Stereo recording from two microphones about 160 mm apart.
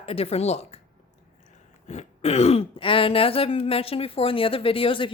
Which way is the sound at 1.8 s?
45° left (ahead or behind).